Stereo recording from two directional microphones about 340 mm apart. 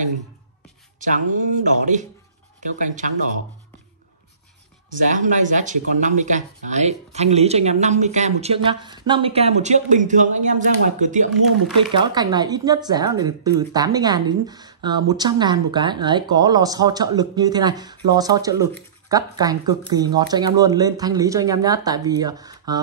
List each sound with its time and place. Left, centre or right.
0.9 s speech: right
5.1 s speech: right